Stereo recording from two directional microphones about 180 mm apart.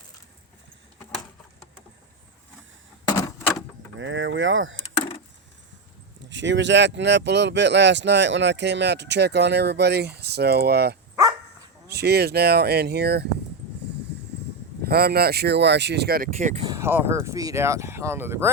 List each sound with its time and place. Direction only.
3.1 s a sound: 15° left (ahead or behind)
3.9 s speech: 90° right
6.2 s speech: 85° right; by 13.2 s 65° right (ahead or behind)
14.8 s speech: 60° right (ahead or behind)
16.4 s speech: 40° right (ahead or behind)
16.6 s speech: 15° right (ahead or behind)